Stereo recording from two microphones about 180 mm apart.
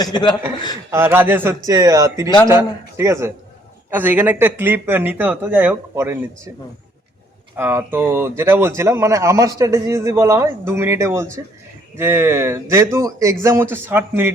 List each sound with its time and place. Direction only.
0.0 s a man's voice: 25° left (ahead or behind)
0.9 s speech: 15° right (ahead or behind)
7.5 s speech: 10° right (ahead or behind)